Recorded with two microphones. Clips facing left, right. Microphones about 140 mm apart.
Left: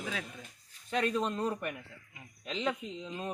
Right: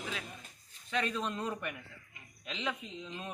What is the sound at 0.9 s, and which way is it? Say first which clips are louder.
Speech: left 4 dB; 40° left (ahead or behind).